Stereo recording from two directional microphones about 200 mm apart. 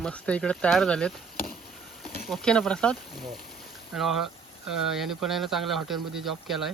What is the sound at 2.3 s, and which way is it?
Speech, 5° left (ahead or behind).